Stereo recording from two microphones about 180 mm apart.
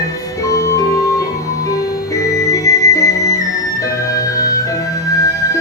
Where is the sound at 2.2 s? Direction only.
20° left (ahead or behind).